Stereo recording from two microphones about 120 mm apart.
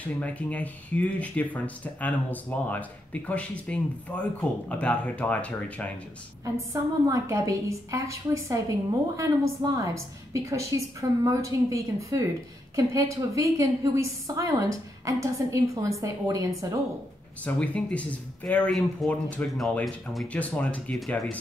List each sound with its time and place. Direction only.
0.0 s speech: 10° left (ahead or behind)
6.4 s a woman's voice: 25° right (ahead or behind)
17.6 s speech: 10° left (ahead or behind)
20.3 s speech: 10° left (ahead or behind)